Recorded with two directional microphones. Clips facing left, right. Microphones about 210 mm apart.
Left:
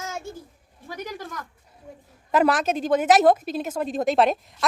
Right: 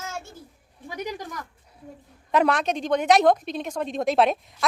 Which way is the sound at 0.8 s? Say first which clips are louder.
Right 2 dB; 15° right (ahead or behind).